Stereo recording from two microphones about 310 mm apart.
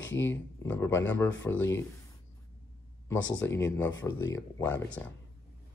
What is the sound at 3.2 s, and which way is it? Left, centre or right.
Speech, left.